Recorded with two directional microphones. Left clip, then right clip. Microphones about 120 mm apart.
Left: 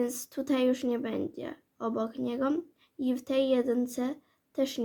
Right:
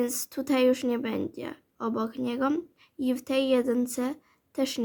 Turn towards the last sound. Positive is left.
turn(degrees=-45)  # may be behind; listen again after turning